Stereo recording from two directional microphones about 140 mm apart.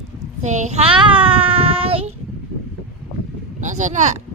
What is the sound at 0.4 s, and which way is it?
Child singing, 60° right (ahead or behind).